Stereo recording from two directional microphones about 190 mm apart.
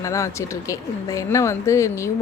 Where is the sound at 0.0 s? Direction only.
15° left (ahead or behind).